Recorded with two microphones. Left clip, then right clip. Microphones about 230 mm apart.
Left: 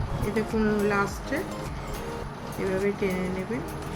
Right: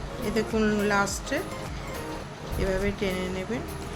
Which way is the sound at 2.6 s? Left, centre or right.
Right.